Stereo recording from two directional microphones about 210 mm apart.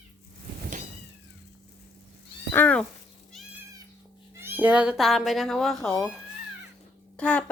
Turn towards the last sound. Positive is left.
turn(degrees=5)  # may be behind; listen again after turning